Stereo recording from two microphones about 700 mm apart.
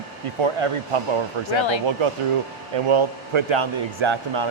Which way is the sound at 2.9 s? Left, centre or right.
Right.